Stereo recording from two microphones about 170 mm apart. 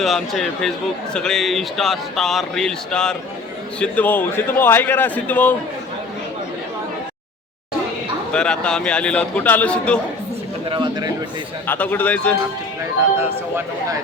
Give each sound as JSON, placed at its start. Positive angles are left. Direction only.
{"t": 0.0, "sound": "a man's voice", "side_deg": 0}
{"t": 8.3, "sound": "a man's voice", "side_deg": 5}
{"t": 10.7, "sound": "speech", "side_deg": -25}
{"t": 11.6, "sound": "a man's voice", "side_deg": 10}